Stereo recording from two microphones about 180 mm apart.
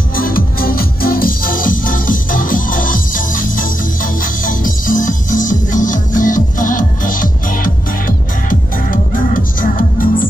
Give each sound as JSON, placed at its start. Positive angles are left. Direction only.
{"t": 0.1, "sound": "music", "side_deg": 55}